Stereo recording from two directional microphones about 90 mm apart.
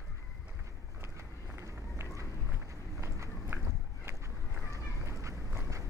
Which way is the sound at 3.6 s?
35° right (ahead or behind).